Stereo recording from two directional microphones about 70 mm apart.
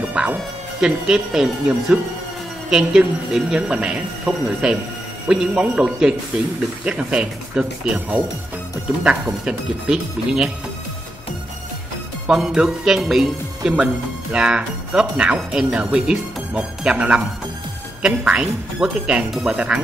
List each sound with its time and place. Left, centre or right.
0.2 s dog: centre
0.7 s speech: centre
12.3 s speech: centre